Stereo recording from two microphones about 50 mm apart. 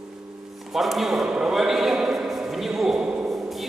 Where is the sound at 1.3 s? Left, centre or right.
Centre.